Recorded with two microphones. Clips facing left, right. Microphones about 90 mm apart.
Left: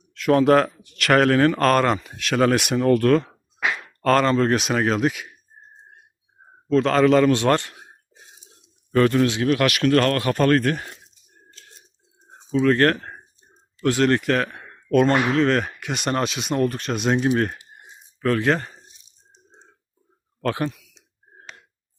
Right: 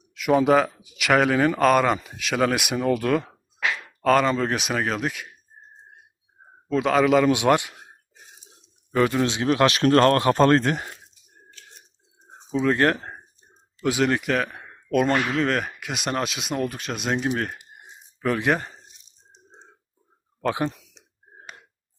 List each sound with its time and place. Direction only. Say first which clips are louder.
0.1 s speech: left 2 dB; 5° right (ahead or behind)
6.7 s a man's voice: left 3 dB; 10° right (ahead or behind)
8.9 s speech: left 3 dB; 10° right (ahead or behind)
12.3 s speech: left 3 dB; 15° right (ahead or behind); by 17.6 s centre (ahead or behind)
18.2 s a man's voice: left 2 dB; 15° right (ahead or behind)
20.7 s a sound: even; 30° right (ahead or behind)